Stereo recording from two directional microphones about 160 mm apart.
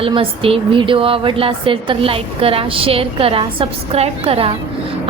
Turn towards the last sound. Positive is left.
turn(degrees=-35)  # may be behind; listen again after turning